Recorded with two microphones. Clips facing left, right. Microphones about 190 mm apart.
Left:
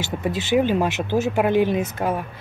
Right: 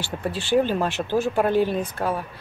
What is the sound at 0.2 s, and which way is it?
Speech, 15° left (ahead or behind).